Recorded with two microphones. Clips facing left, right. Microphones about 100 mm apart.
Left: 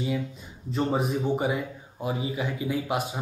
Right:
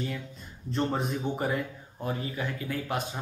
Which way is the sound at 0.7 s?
5° left (ahead or behind).